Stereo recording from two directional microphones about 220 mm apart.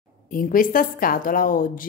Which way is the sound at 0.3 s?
40° left (ahead or behind).